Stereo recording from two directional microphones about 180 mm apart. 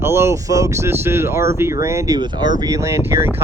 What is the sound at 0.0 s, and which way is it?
Speech, 15° right (ahead or behind).